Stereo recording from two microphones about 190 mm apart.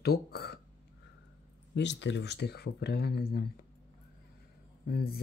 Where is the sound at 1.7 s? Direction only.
65° left (ahead or behind).